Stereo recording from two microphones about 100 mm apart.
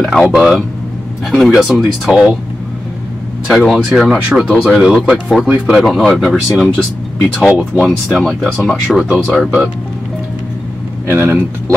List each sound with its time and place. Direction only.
0.0 s speech: centre (ahead or behind)
3.4 s speech: centre (ahead or behind)
11.1 s speech: 20° right (ahead or behind)